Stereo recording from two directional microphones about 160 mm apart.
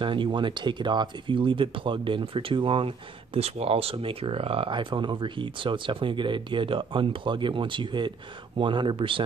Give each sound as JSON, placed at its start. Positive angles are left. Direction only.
{"t": 0.0, "sound": "speech", "side_deg": -30}